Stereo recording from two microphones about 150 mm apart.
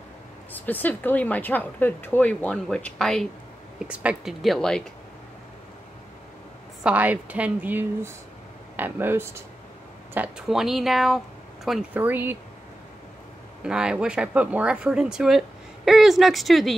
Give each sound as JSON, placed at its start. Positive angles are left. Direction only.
{"t": 0.5, "sound": "a woman's voice", "side_deg": 10}
{"t": 3.8, "sound": "speech", "side_deg": -5}
{"t": 6.8, "sound": "speech", "side_deg": -10}
{"t": 11.9, "sound": "speech", "side_deg": -15}
{"t": 13.7, "sound": "speech", "side_deg": -5}